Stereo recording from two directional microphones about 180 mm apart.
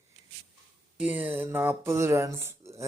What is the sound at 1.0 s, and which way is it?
Speech, 10° right (ahead or behind).